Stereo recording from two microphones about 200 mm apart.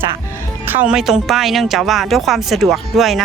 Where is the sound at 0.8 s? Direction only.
5° right (ahead or behind).